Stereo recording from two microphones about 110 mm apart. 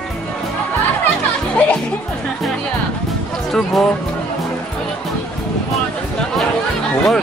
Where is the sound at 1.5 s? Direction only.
10° left (ahead or behind).